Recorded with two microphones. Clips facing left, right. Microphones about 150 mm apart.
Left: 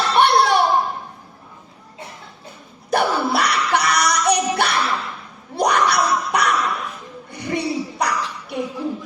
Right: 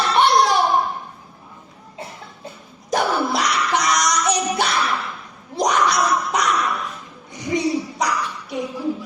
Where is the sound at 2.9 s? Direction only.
60° left (ahead or behind).